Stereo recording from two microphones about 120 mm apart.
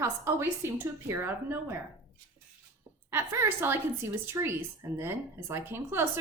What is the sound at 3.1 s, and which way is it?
A woman's voice, 20° right (ahead or behind).